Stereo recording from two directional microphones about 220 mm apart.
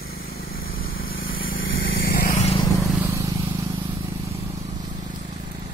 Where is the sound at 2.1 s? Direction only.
40° left (ahead or behind).